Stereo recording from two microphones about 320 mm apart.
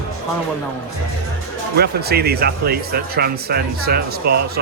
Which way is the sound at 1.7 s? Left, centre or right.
Right.